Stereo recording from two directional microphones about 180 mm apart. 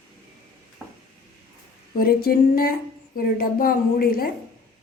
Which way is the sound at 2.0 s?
55° left (ahead or behind).